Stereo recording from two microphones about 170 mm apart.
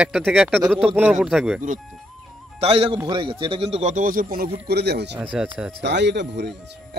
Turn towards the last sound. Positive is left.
turn(degrees=-90)